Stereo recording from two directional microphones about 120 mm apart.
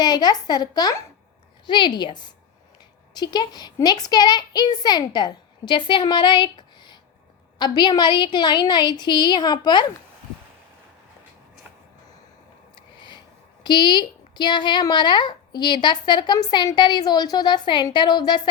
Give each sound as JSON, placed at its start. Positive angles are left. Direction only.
{"t": 0.0, "sound": "a woman's voice", "side_deg": 35}
{"t": 3.2, "sound": "a woman's voice", "side_deg": 35}
{"t": 13.0, "sound": "a sound", "side_deg": 40}
{"t": 13.7, "sound": "a woman's voice", "side_deg": 40}